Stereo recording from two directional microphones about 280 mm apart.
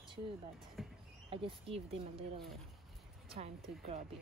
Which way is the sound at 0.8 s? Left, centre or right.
Centre.